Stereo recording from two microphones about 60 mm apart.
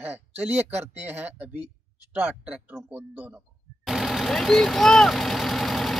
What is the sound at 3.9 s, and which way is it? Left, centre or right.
Vehicle, centre.